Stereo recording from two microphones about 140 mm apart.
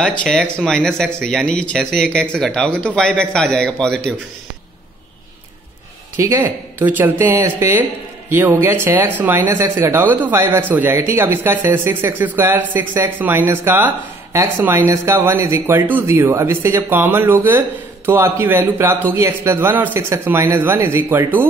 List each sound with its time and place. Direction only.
0.2 s speech: 5° left (ahead or behind)
6.1 s speech: 20° right (ahead or behind)